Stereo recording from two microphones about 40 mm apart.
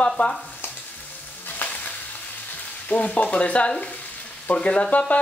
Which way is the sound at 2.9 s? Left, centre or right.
Left.